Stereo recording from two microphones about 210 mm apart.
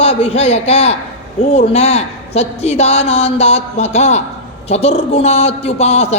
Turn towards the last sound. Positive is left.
turn(degrees=30)  # may be behind; listen again after turning